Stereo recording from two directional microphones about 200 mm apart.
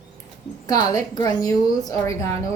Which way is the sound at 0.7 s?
15° left (ahead or behind).